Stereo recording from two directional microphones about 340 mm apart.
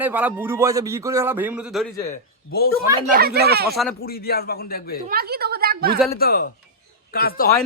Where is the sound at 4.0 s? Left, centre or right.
Left.